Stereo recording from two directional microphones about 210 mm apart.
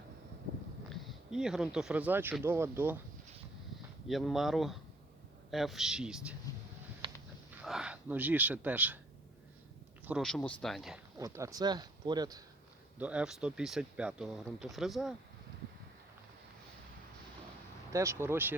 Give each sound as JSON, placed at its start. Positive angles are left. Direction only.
{"t": 1.0, "sound": "speech", "side_deg": -5}
{"t": 4.1, "sound": "speech", "side_deg": 0}
{"t": 7.0, "sound": "a sound", "side_deg": -25}
{"t": 7.6, "sound": "speech", "side_deg": -5}
{"t": 10.1, "sound": "speech", "side_deg": 0}
{"t": 11.2, "sound": "speech", "side_deg": -15}
{"t": 13.0, "sound": "speech", "side_deg": -5}
{"t": 17.9, "sound": "speech", "side_deg": -15}